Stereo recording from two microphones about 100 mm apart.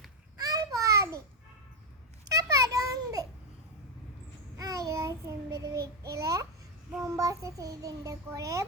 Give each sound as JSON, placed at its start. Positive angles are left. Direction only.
{"t": 0.3, "sound": "babbling", "side_deg": -40}
{"t": 2.3, "sound": "a sound", "side_deg": -35}
{"t": 4.5, "sound": "child singing", "side_deg": -35}